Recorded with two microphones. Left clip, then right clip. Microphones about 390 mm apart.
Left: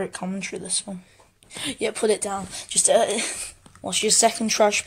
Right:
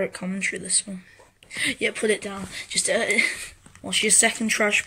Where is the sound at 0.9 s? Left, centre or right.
Left.